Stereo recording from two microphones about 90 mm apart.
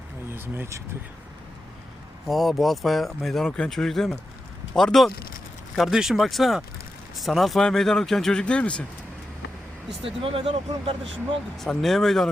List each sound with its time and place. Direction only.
0.3 s speech: 25° right (ahead or behind)
2.2 s speech: centre (ahead or behind)
10.0 s speech: 90° right
11.5 s speech: 5° left (ahead or behind)